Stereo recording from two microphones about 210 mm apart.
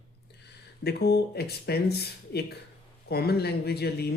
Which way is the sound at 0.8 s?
50° left (ahead or behind).